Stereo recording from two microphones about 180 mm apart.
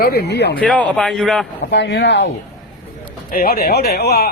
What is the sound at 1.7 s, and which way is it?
Speech, 75° left (ahead or behind).